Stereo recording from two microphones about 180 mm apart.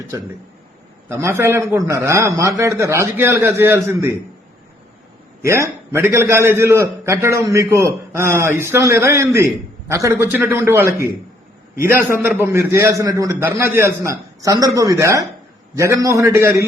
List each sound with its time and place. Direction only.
1.0 s a man's voice: 15° right (ahead or behind)
5.4 s a man's voice: 15° right (ahead or behind)
12.2 s a man's voice: 10° right (ahead or behind)